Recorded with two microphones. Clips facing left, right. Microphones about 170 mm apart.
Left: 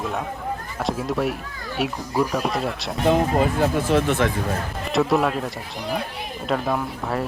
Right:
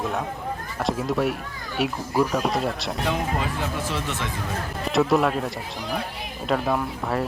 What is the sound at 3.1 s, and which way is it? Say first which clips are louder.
Speech: left 9 dB; 45° left (ahead or behind).